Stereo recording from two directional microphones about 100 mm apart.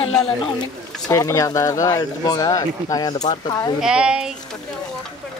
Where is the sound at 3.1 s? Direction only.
50° left (ahead or behind).